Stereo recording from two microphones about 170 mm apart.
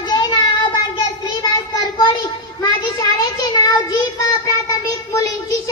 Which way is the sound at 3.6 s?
20° left (ahead or behind).